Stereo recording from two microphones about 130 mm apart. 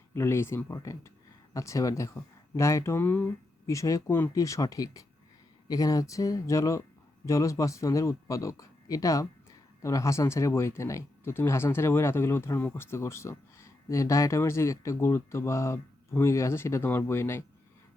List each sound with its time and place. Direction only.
0.1 s speech: 20° left (ahead or behind)